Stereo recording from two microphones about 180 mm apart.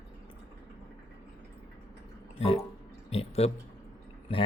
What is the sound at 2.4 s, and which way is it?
Drip, 35° left (ahead or behind).